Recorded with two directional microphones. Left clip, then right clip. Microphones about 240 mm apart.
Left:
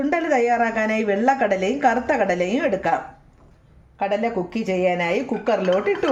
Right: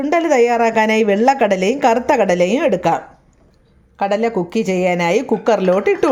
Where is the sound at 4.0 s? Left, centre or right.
Right.